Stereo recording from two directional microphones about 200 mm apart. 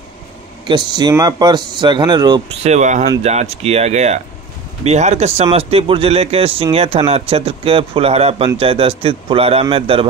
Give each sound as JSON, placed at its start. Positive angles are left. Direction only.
{"t": 0.7, "sound": "speech", "side_deg": -20}